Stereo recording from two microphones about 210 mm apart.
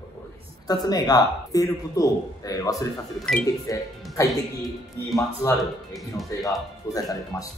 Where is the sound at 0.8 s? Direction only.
20° left (ahead or behind).